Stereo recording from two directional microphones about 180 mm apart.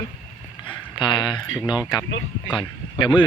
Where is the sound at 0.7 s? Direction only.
25° left (ahead or behind).